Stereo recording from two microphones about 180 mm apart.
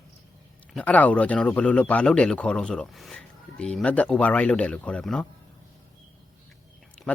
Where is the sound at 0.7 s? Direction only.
5° left (ahead or behind).